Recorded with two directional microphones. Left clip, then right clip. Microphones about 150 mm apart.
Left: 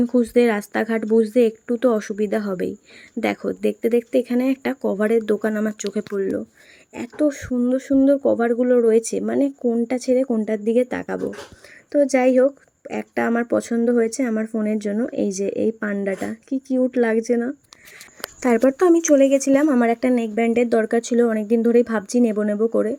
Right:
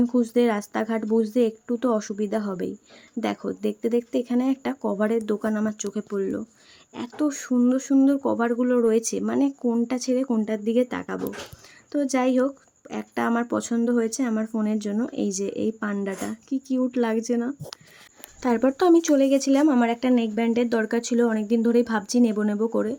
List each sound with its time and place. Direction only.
0.0 s speech: 10° left (ahead or behind)